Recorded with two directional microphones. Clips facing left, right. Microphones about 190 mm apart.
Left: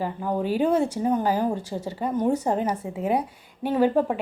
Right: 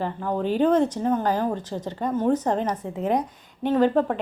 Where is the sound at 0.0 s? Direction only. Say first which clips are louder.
Even; 10° left (ahead or behind).